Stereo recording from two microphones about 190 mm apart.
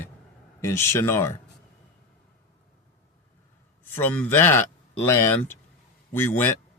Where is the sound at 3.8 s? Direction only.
10° left (ahead or behind).